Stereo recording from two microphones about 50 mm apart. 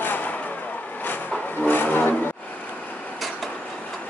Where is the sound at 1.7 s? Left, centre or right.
Left.